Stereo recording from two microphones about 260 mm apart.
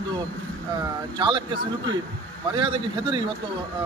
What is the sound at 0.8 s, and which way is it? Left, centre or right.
Speech, centre.